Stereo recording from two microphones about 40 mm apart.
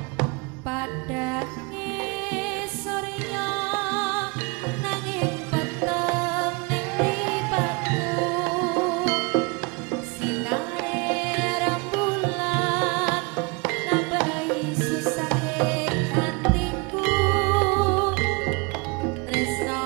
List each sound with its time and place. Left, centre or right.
0.2 s music: centre